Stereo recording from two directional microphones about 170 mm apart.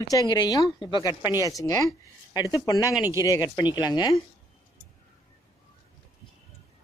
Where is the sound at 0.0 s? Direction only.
20° left (ahead or behind).